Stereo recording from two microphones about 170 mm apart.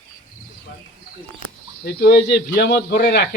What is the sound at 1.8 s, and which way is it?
A man's voice, 70° left (ahead or behind).